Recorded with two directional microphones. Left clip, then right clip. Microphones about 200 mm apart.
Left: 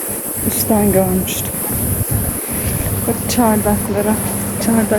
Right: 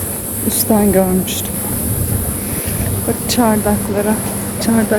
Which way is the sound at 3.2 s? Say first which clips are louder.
Right 1 dB; centre (ahead or behind).